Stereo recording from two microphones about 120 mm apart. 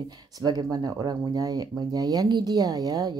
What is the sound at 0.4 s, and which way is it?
Speech, 35° right (ahead or behind).